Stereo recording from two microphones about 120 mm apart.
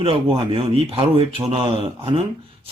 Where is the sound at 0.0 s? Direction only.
50° right (ahead or behind).